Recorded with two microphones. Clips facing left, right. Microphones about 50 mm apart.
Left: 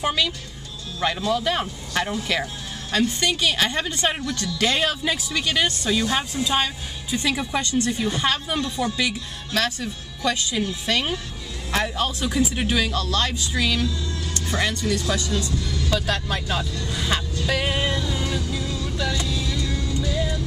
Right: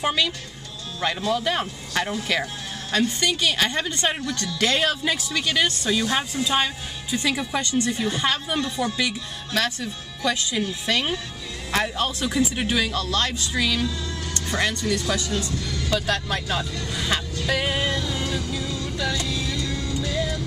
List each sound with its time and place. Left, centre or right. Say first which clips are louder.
0.0 s speech: even; centre
14.9 s speech: even; centre
16.9 s music: even; centre
17.7 s music: left 1 dB; centre
19.1 s vehicle: even; centre
19.5 s music: left 1 dB; left
19.9 s music: left 1 dB; right